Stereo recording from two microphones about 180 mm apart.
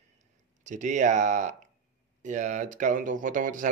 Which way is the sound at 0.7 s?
45° right (ahead or behind).